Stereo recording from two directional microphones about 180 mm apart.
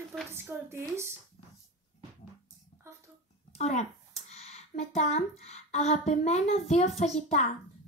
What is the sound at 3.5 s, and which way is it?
A child's voice, 35° left (ahead or behind).